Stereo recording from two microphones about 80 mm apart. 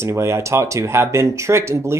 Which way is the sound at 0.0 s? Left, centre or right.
Right.